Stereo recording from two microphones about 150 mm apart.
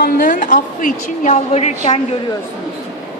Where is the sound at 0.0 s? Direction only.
65° left (ahead or behind); by 1.7 s 50° left (ahead or behind).